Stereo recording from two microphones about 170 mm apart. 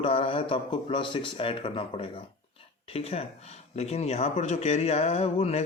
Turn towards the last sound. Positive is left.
turn(degrees=40)  # may be behind; listen again after turning